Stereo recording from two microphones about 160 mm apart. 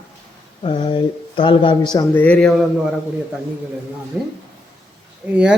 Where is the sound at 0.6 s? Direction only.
30° left (ahead or behind).